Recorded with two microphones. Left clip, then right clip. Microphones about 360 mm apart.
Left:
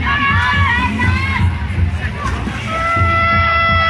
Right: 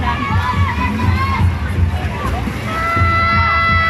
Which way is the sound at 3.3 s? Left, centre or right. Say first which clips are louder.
Left 1 dB; centre.